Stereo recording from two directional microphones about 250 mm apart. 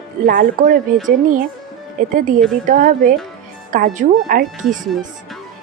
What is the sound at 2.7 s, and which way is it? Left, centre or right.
A woman's voice, right.